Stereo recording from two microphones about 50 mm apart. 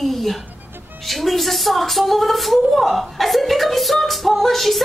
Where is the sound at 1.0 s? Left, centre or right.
Centre.